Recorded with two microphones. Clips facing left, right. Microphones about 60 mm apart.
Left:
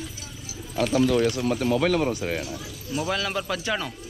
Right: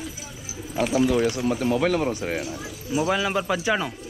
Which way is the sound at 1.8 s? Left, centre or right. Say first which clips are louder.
Even; right.